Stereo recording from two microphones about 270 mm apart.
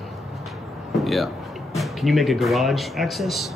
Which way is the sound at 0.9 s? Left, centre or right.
Centre.